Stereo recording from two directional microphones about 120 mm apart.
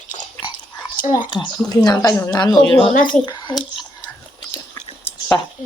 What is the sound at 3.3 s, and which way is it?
Speech, 35° left (ahead or behind).